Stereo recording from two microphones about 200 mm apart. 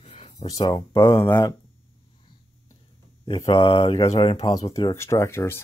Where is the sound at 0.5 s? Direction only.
20° left (ahead or behind).